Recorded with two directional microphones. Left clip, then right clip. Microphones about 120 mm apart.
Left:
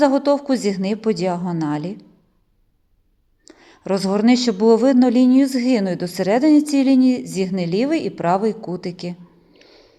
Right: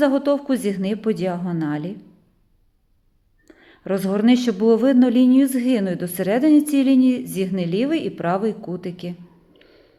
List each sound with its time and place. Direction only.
0.0 s speech: 25° left (ahead or behind)
3.4 s speech: 30° left (ahead or behind)